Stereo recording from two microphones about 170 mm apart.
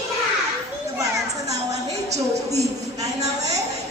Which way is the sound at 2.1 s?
40° right (ahead or behind).